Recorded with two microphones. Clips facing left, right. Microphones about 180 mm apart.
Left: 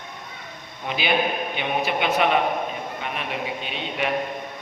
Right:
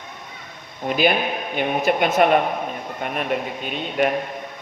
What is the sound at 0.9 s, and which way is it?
Speech, 45° right (ahead or behind).